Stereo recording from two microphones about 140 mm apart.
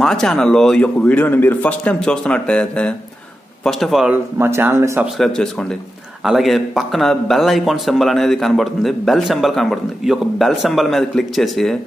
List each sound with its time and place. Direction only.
0.0 s speech: 5° left (ahead or behind)
4.1 s speech: 15° right (ahead or behind)
5.0 s speech: centre (ahead or behind)